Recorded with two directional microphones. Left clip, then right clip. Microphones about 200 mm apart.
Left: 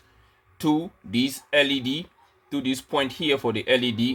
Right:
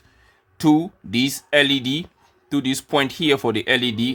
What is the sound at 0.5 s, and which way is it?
Speech, 40° right (ahead or behind).